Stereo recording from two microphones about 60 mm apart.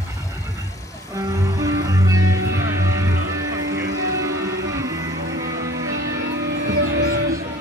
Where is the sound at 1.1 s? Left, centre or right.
Right.